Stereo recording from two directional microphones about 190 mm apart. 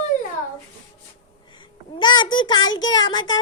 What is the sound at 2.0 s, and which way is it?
Speech, 25° left (ahead or behind).